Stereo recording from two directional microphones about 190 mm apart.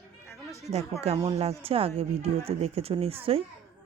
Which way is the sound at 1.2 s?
30° right (ahead or behind).